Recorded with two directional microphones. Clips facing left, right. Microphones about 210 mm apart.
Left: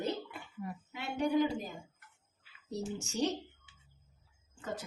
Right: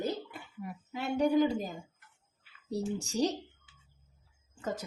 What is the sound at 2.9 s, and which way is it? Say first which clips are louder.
Speech: right 2 dB; 35° right (ahead or behind).